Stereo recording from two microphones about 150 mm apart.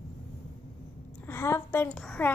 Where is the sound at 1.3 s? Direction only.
15° left (ahead or behind).